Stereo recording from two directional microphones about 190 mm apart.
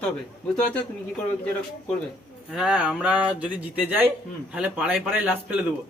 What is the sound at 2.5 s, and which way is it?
A man's voice, 5° right (ahead or behind).